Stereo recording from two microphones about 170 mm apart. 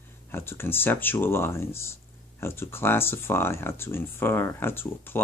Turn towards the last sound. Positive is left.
turn(degrees=15)  # may be behind; listen again after turning